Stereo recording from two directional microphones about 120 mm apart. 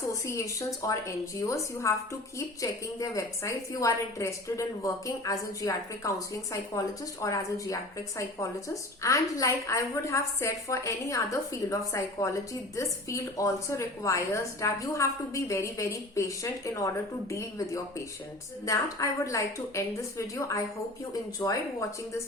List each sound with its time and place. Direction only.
0.1 s a woman's voice: 25° left (ahead or behind)
18.6 s a woman's voice: 30° left (ahead or behind)